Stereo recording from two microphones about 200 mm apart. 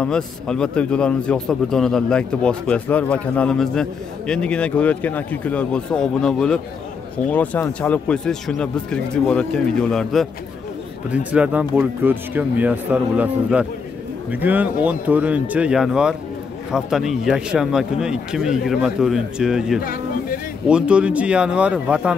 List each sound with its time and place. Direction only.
0.0 s a man's voice: 5° left (ahead or behind)
19.8 s speech: 45° left (ahead or behind)
20.6 s a man's voice: 5° right (ahead or behind)